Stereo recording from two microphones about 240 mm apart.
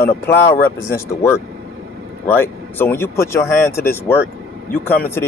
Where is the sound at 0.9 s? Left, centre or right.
Centre.